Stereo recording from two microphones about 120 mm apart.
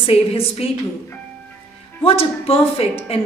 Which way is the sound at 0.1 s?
55° left (ahead or behind).